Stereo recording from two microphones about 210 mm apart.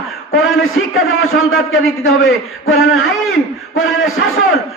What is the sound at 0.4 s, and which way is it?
A man's voice, 75° left (ahead or behind).